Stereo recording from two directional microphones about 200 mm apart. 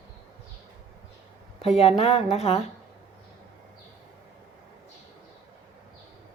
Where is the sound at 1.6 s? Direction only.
30° left (ahead or behind).